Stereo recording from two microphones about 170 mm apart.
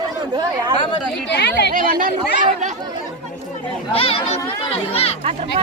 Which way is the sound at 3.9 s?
35° left (ahead or behind).